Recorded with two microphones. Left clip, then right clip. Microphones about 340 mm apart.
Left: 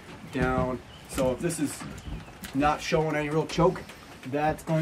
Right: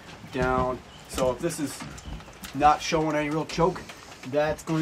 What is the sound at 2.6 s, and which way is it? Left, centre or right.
Speech, centre.